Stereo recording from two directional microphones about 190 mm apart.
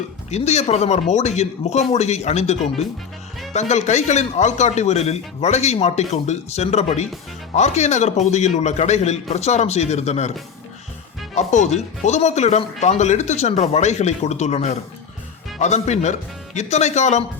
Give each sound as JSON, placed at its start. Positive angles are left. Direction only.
{"t": 0.3, "sound": "speech", "side_deg": 35}
{"t": 11.3, "sound": "speech", "side_deg": 40}